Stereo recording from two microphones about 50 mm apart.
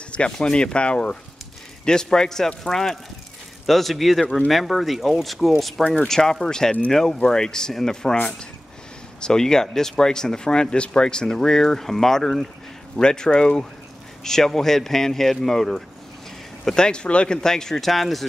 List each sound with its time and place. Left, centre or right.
0.1 s speech: centre